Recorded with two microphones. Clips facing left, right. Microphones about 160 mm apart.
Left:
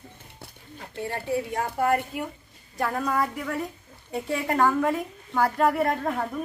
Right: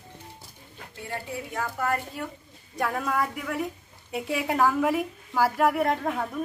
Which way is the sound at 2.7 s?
Centre (ahead or behind).